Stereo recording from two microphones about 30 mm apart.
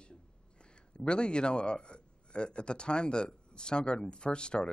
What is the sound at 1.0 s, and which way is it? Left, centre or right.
A man's voice, left.